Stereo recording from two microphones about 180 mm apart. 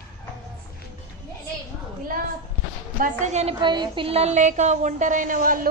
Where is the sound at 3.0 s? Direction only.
40° right (ahead or behind).